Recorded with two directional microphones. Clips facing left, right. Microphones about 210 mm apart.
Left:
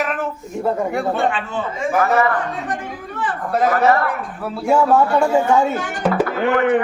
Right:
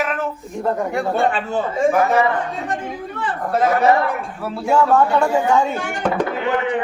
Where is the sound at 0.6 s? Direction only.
5° left (ahead or behind).